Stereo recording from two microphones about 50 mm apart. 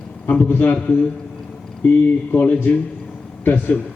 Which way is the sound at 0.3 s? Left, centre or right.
Left.